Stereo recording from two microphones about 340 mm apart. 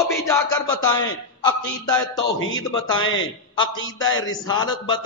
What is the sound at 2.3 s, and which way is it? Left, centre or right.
Speech, left.